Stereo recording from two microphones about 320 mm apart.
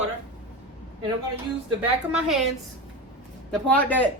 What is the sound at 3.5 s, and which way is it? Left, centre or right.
Speech, centre.